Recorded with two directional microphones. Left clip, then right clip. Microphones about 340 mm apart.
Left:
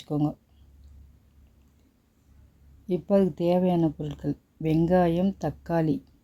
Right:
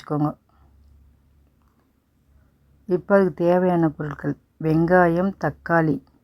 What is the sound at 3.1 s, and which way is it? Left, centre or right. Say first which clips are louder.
Speech: right 5 dB; centre.